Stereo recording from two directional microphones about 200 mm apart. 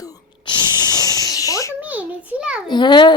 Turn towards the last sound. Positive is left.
turn(degrees=20)  # may be behind; listen again after turning